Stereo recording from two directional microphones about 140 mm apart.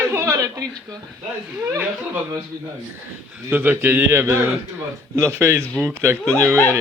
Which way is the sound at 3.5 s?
15° right (ahead or behind).